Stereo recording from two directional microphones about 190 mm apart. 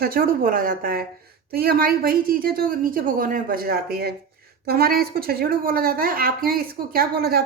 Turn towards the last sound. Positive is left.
turn(degrees=-55)  # may be behind; listen again after turning